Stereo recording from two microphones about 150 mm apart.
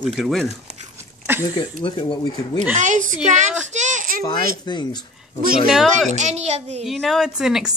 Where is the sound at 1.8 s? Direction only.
35° left (ahead or behind).